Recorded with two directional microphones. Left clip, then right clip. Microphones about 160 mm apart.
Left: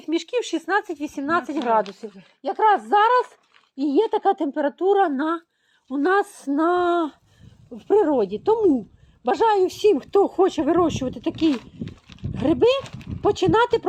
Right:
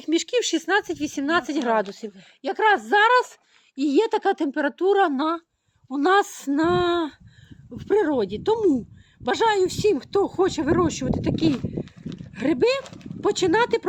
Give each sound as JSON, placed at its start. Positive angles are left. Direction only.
{"t": 0.0, "sound": "speech", "side_deg": -40}
{"t": 0.5, "sound": "speech", "side_deg": -50}
{"t": 0.9, "sound": "speech", "side_deg": -35}
{"t": 6.6, "sound": "speech", "side_deg": -10}
{"t": 11.9, "sound": "a sound", "side_deg": -35}
{"t": 12.4, "sound": "speech", "side_deg": 0}